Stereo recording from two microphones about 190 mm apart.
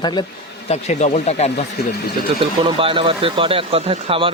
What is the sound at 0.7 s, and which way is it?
Speech, 35° left (ahead or behind).